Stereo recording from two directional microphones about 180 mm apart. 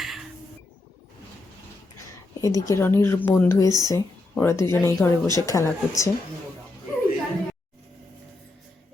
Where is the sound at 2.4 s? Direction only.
20° left (ahead or behind).